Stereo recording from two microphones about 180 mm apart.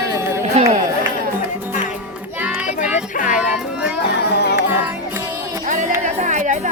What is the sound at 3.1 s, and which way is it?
Music, 45° left (ahead or behind).